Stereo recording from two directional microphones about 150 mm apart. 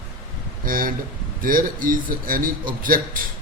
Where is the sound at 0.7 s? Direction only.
70° right (ahead or behind).